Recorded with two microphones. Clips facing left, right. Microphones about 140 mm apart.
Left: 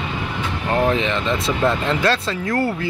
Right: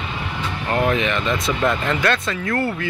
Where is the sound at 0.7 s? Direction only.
25° left (ahead or behind).